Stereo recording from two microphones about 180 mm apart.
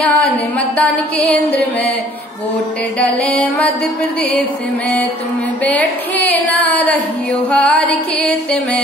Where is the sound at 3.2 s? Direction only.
5° left (ahead or behind).